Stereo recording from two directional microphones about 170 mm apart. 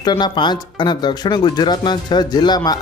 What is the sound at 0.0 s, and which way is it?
Speech, 25° left (ahead or behind).